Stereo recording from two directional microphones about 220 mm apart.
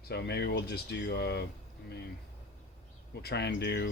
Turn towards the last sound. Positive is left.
turn(degrees=50)  # may be behind; listen again after turning